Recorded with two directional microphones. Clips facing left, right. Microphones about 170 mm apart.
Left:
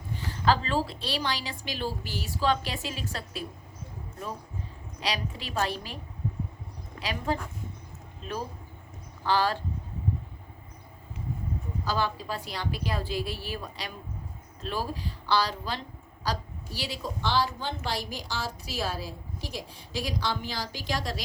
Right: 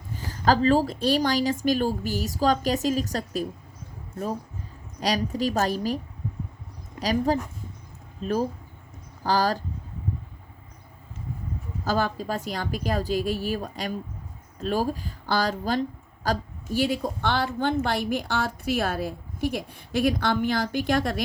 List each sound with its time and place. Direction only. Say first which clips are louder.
0.1 s a woman's voice: right 3 dB; 40° right (ahead or behind)
4.9 s a woman's voice: right 8 dB; 40° right (ahead or behind)
7.0 s a woman's voice: right 7 dB; 40° right (ahead or behind)
11.9 s a woman's voice: right 5 dB; 45° right (ahead or behind)